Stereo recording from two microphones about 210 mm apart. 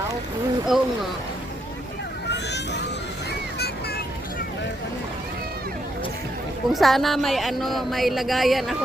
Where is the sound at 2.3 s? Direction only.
55° left (ahead or behind).